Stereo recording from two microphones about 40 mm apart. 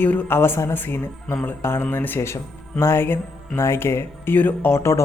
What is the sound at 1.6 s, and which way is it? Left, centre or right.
Speech, left.